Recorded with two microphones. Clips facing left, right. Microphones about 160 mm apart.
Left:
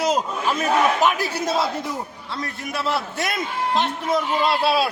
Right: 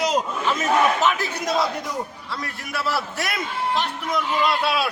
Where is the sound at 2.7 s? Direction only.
20° left (ahead or behind).